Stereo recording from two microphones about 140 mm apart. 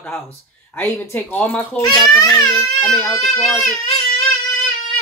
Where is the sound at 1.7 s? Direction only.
30° left (ahead or behind).